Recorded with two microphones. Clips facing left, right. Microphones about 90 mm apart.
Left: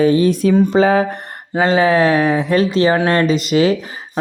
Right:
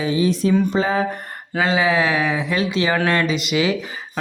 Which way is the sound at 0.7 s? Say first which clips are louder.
Left 7 dB; 75° left (ahead or behind).